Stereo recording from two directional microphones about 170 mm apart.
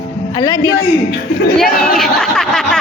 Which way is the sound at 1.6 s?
Centre (ahead or behind).